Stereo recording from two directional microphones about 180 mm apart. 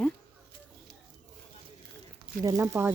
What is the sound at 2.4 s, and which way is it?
Speech, 15° right (ahead or behind).